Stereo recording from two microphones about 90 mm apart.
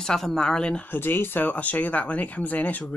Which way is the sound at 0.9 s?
25° left (ahead or behind).